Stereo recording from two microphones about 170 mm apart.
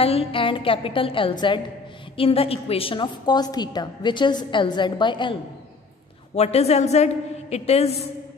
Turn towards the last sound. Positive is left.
turn(degrees=40)  # may be behind; listen again after turning